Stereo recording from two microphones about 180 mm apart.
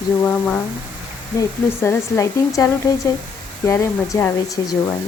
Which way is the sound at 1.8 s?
15° left (ahead or behind).